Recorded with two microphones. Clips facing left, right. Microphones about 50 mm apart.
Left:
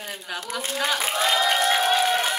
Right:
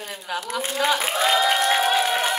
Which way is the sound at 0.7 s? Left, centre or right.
Centre.